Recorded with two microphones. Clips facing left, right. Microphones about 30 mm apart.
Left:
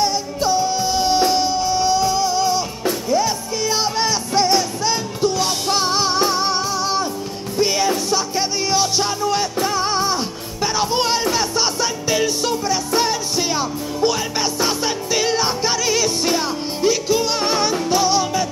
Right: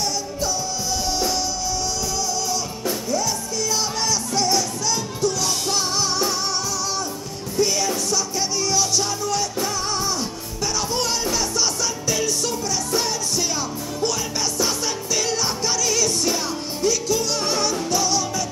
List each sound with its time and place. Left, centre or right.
0.0 s music: left